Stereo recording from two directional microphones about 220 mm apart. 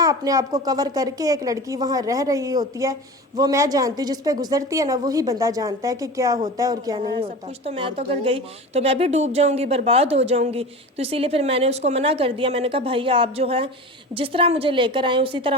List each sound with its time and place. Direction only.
0.0 s a woman's voice: 15° right (ahead or behind)